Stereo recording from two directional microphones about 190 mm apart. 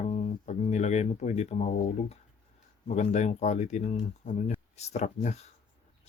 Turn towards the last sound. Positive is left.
turn(degrees=40)  # may be behind; listen again after turning